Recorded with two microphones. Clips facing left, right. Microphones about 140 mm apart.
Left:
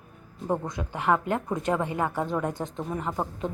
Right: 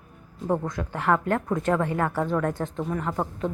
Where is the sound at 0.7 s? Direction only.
15° left (ahead or behind).